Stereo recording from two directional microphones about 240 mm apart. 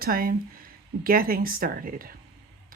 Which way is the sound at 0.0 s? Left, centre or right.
Right.